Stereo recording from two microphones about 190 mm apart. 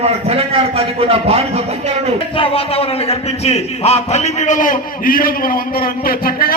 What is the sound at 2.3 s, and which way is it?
A man's voice, 30° left (ahead or behind).